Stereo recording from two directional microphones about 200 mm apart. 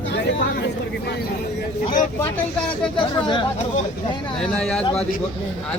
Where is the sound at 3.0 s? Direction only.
25° left (ahead or behind).